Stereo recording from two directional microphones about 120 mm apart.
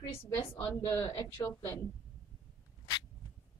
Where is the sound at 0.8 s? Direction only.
30° left (ahead or behind).